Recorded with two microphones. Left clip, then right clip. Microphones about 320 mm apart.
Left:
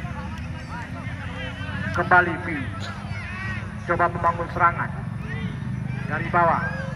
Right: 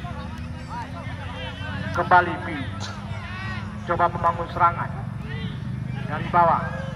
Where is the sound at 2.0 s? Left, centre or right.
Right.